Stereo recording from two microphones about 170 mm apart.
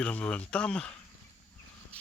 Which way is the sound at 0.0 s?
5° left (ahead or behind).